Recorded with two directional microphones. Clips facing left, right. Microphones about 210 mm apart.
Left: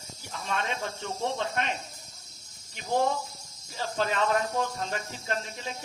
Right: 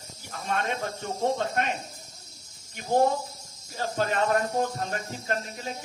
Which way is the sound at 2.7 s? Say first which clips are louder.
Right 4 dB; 45° right (ahead or behind).